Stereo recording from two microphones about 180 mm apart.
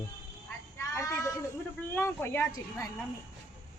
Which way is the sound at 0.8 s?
15° left (ahead or behind).